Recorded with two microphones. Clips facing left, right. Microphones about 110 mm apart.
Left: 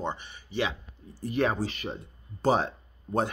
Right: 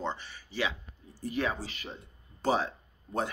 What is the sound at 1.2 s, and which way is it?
Speech, 55° left (ahead or behind).